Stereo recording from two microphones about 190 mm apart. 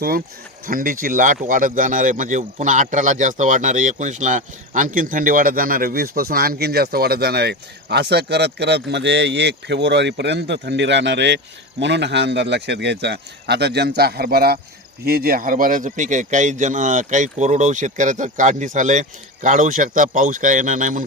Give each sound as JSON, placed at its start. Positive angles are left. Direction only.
{"t": 0.7, "sound": "a man's voice", "side_deg": -50}